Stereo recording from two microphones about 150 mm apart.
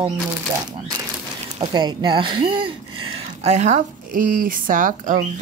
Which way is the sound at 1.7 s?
30° right (ahead or behind).